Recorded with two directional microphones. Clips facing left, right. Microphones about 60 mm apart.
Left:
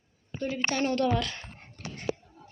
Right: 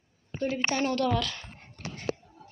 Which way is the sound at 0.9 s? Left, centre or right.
Centre.